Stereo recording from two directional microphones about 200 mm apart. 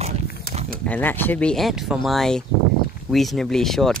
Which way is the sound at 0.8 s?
10° left (ahead or behind).